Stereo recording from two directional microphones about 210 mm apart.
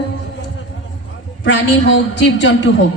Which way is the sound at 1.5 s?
60° left (ahead or behind).